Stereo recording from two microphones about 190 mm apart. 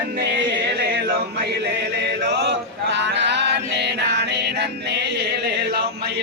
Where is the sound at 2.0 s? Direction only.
65° right (ahead or behind).